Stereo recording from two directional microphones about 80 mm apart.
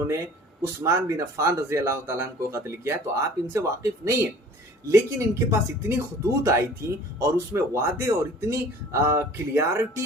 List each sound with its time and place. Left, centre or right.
0.8 s speech: right